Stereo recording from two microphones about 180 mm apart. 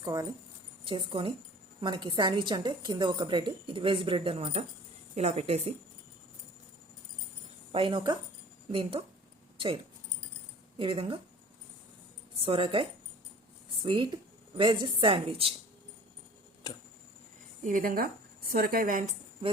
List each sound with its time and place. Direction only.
0.0 s a woman's voice: 20° right (ahead or behind)
7.7 s a woman's voice: 30° right (ahead or behind)
10.8 s a woman's voice: 30° right (ahead or behind)
12.4 s a woman's voice: 30° right (ahead or behind)
16.7 s a sound: 20° left (ahead or behind)
17.6 s a woman's voice: 45° right (ahead or behind)